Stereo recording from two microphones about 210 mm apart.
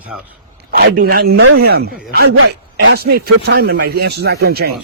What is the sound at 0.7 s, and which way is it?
Speech, 45° right (ahead or behind).